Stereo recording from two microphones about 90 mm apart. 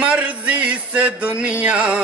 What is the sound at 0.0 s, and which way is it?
Music, 15° right (ahead or behind).